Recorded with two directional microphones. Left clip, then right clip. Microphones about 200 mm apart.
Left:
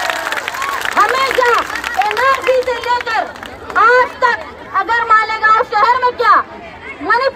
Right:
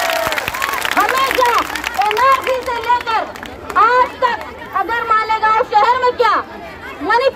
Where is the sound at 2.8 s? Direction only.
45° left (ahead or behind).